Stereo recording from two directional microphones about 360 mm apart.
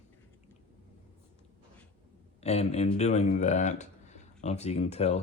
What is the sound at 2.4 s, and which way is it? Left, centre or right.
Speech, centre.